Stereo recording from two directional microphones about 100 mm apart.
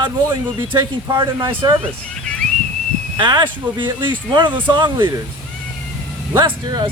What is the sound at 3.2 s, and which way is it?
Speech, 50° right (ahead or behind).